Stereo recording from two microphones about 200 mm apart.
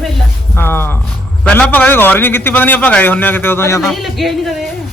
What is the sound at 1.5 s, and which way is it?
A man's voice, 5° left (ahead or behind).